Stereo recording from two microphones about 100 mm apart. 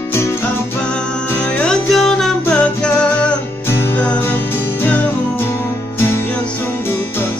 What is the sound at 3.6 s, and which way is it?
Music, 25° left (ahead or behind).